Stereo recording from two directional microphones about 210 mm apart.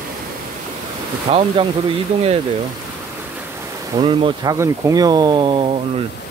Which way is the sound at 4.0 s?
25° right (ahead or behind).